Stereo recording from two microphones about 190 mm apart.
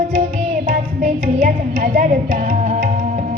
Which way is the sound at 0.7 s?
45° right (ahead or behind).